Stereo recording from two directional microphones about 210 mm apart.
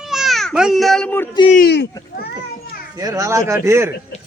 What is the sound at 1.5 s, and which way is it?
Speech, 50° left (ahead or behind).